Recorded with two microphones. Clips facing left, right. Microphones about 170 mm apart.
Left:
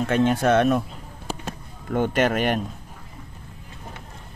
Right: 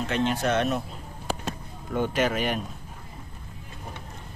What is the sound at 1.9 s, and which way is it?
Speech, 60° left (ahead or behind).